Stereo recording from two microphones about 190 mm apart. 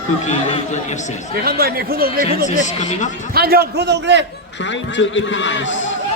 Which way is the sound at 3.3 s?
55° right (ahead or behind).